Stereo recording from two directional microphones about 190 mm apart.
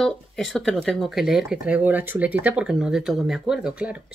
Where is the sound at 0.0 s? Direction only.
Centre (ahead or behind).